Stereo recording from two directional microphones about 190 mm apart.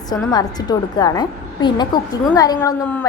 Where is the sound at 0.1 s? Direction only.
20° left (ahead or behind).